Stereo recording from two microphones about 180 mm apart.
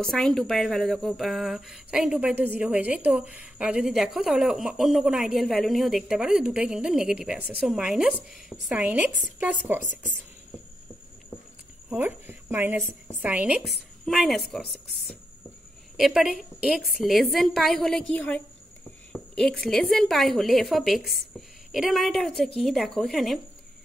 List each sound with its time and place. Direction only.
0.0 s speech: 5° left (ahead or behind)
11.9 s a woman's voice: 10° right (ahead or behind)
14.0 s speech: centre (ahead or behind)